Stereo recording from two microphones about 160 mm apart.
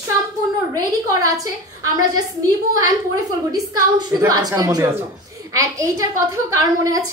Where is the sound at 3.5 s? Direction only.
20° right (ahead or behind).